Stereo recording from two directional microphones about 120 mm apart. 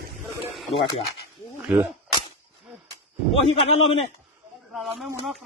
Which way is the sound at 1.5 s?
10° right (ahead or behind).